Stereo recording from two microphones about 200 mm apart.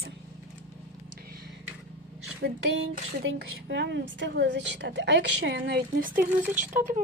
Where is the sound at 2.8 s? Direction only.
70° right (ahead or behind); by 6.8 s 40° right (ahead or behind).